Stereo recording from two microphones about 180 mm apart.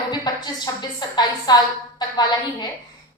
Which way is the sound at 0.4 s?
20° left (ahead or behind).